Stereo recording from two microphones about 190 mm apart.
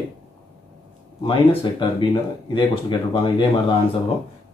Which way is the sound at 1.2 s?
25° left (ahead or behind).